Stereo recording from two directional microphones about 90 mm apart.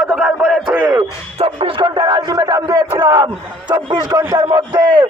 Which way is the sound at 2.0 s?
55° right (ahead or behind).